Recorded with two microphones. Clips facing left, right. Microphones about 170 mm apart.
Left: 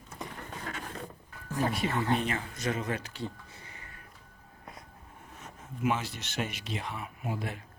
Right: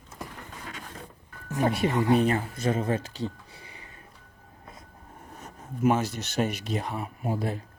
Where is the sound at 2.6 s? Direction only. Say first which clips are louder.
Right 5 dB; 30° right (ahead or behind).